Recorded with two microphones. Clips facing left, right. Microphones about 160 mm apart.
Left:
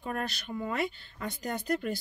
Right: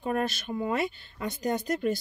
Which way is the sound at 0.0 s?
20° right (ahead or behind).